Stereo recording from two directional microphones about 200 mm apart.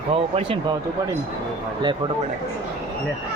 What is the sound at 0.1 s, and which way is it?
Speech, 30° right (ahead or behind).